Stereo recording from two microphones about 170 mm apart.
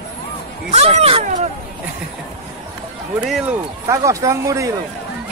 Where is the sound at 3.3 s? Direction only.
5° right (ahead or behind).